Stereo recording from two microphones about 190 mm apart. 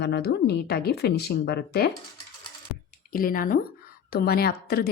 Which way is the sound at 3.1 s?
45° left (ahead or behind).